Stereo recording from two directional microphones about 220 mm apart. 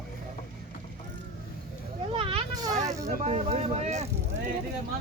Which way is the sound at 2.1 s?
25° right (ahead or behind).